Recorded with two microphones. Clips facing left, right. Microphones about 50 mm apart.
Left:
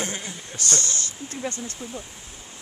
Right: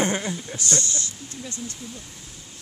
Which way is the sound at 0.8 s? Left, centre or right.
Left.